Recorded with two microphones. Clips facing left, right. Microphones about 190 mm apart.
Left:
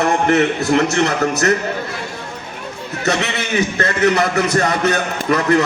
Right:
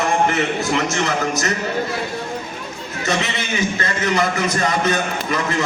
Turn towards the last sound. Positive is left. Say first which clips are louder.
# left 6 dB
turn(degrees=60)  # may be behind; listen again after turning